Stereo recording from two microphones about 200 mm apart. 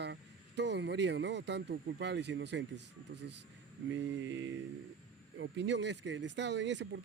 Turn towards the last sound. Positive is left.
turn(degrees=-60)  # may be behind; listen again after turning